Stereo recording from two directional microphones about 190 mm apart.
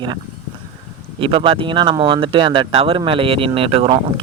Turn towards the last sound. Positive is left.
turn(degrees=-30)  # may be behind; listen again after turning